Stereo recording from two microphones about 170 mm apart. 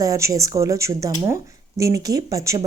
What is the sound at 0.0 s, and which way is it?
A woman's voice, 20° right (ahead or behind).